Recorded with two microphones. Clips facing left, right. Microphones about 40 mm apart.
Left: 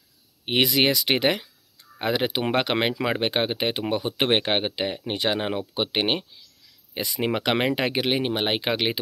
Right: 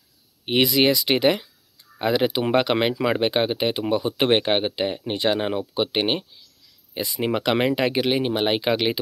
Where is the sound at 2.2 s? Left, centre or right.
Left.